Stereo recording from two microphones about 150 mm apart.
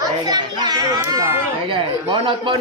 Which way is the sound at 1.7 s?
35° right (ahead or behind).